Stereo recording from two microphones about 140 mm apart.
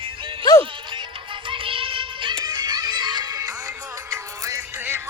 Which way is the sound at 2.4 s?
30° right (ahead or behind).